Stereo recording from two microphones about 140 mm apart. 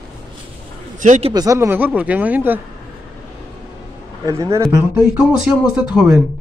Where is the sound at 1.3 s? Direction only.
25° right (ahead or behind).